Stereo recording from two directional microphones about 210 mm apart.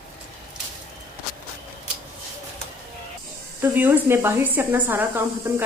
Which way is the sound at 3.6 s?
10° right (ahead or behind).